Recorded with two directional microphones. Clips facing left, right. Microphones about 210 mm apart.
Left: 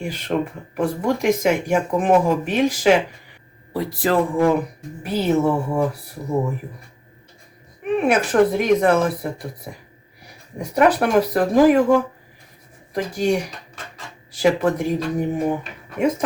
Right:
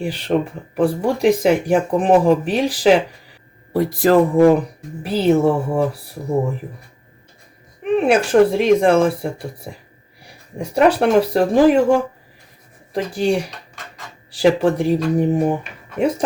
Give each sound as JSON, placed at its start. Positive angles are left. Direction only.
{"t": 0.0, "sound": "speech", "side_deg": -30}
{"t": 5.0, "sound": "speech", "side_deg": -30}
{"t": 7.9, "sound": "a woman's voice", "side_deg": -30}
{"t": 10.6, "sound": "a woman's voice", "side_deg": -30}
{"t": 12.9, "sound": "speech", "side_deg": -30}